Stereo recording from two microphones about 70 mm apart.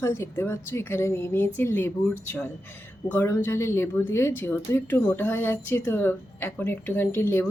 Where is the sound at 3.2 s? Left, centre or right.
Left.